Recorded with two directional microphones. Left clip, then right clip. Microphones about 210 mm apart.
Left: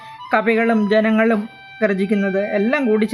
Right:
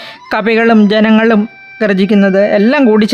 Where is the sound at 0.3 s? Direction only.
45° right (ahead or behind).